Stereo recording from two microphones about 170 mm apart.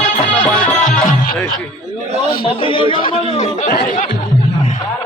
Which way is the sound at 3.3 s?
45° left (ahead or behind).